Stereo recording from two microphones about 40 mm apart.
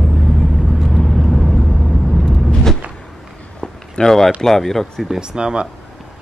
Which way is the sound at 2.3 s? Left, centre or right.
Centre.